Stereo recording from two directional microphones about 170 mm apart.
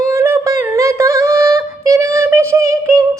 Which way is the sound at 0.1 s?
15° right (ahead or behind).